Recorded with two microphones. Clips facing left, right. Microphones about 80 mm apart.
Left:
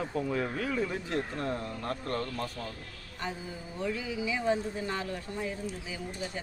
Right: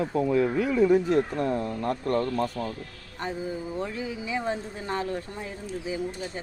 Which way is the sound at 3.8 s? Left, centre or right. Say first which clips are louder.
Even; right.